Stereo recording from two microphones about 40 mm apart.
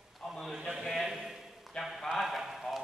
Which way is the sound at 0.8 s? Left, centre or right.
Centre.